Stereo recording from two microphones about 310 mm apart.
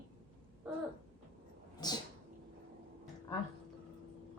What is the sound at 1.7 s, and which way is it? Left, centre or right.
Speech, centre.